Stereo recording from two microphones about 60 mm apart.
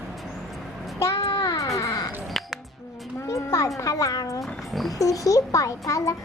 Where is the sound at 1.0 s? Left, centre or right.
Left.